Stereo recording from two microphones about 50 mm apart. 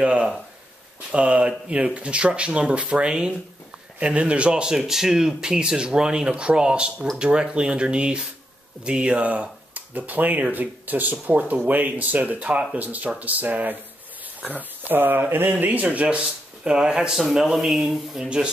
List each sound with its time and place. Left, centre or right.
0.0 s speech: right
16.6 s speech: centre
18.2 s speech: centre